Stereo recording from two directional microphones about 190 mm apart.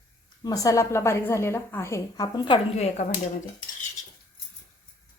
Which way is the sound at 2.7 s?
35° left (ahead or behind).